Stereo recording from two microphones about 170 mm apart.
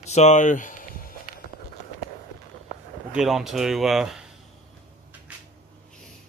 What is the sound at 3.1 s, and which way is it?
Speech, 5° right (ahead or behind).